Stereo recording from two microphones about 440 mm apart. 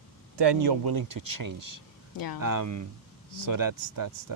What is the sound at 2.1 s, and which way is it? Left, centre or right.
Speech, left.